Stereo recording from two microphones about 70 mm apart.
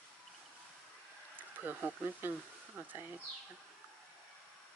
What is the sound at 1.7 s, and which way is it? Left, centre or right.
Speech, right.